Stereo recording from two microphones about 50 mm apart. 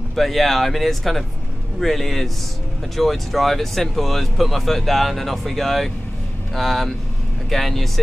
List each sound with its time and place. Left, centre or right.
0.1 s speech: centre